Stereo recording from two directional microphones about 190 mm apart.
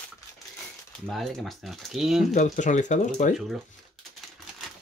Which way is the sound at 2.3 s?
40° left (ahead or behind).